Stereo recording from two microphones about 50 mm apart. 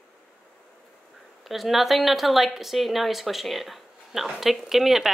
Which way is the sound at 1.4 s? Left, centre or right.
Centre.